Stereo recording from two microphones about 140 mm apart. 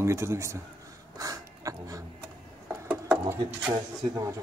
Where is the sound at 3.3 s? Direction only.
15° right (ahead or behind).